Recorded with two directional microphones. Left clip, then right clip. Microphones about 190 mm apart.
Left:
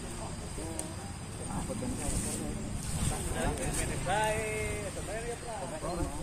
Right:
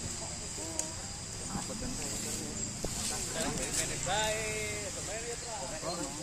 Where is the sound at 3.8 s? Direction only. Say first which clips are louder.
Left 2 dB; 20° left (ahead or behind).